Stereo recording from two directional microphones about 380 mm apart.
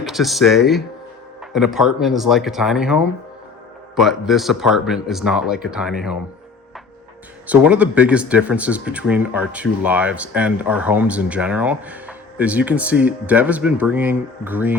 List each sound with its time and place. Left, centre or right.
0.0 s speech: centre
7.4 s speech: centre